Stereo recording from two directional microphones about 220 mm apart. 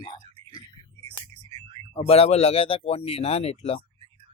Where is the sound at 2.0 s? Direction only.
25° left (ahead or behind).